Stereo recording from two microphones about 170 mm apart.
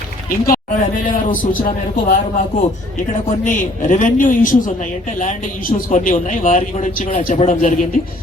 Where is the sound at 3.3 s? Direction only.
45° left (ahead or behind).